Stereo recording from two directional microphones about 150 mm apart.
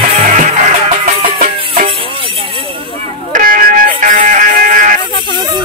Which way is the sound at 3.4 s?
65° right (ahead or behind).